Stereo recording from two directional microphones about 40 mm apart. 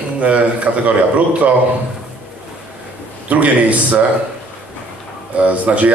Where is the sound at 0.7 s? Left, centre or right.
Right.